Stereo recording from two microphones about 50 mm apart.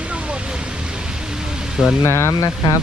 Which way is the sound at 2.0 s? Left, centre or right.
Left.